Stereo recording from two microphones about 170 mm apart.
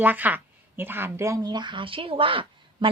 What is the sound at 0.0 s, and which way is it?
Speech, 10° right (ahead or behind).